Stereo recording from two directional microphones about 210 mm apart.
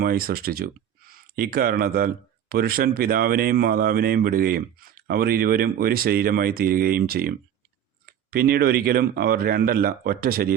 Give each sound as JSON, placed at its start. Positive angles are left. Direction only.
{"t": 0.0, "sound": "speech", "side_deg": -45}